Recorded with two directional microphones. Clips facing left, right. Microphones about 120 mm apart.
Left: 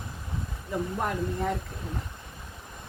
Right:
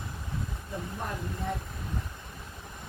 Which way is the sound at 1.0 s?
75° left (ahead or behind).